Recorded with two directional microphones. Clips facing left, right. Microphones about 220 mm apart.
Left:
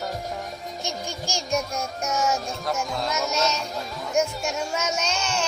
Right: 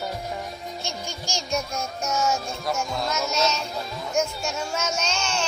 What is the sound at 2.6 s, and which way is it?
Speech, centre (ahead or behind).